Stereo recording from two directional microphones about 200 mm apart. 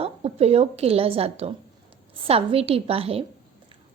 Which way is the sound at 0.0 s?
30° right (ahead or behind).